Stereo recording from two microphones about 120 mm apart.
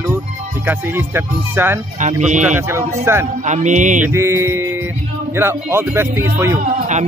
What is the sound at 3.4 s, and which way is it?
Speech, 90° right.